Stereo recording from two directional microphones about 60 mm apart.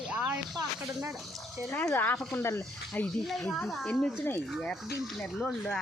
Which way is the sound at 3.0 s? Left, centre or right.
Left.